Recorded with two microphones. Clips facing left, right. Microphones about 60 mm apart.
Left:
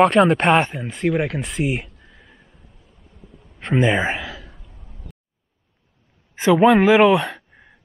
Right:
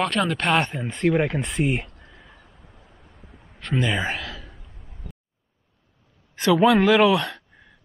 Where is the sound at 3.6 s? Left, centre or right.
Left.